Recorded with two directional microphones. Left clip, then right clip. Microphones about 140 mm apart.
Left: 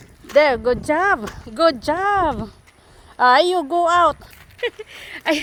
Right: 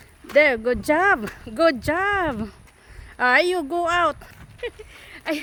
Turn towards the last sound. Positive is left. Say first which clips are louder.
# left 7 dB
turn(degrees=45)  # may be behind; listen again after turning